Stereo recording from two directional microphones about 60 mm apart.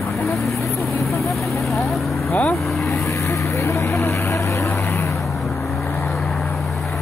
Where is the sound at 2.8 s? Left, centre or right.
Left.